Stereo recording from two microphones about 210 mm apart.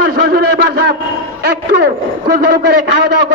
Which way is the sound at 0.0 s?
50° right (ahead or behind).